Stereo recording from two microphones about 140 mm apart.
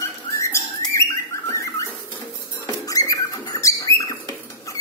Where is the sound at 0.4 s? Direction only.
20° left (ahead or behind).